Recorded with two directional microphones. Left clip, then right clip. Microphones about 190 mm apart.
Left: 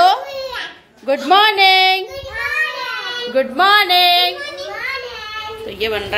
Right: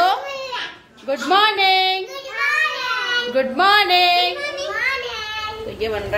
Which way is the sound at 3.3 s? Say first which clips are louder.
Left 3 dB; 10° left (ahead or behind).